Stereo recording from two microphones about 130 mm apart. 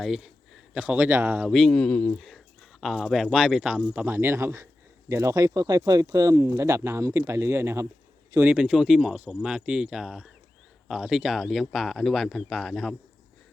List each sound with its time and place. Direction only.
0.0 s speech: centre (ahead or behind)
1.5 s speech: centre (ahead or behind)
2.8 s speech: centre (ahead or behind)